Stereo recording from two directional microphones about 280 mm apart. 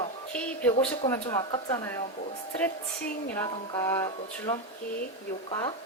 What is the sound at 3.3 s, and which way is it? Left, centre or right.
Speech, centre.